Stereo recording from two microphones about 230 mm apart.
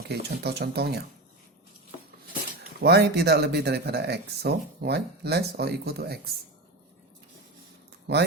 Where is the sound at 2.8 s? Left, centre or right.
Right.